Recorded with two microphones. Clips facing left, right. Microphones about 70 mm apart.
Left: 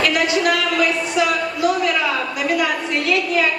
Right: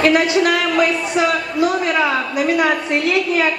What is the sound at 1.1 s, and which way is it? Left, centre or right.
A woman's voice, right.